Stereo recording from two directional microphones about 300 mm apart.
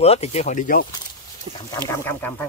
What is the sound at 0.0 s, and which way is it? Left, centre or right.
Speech, left.